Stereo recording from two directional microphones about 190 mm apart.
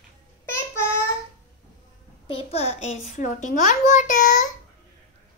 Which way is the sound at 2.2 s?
30° left (ahead or behind).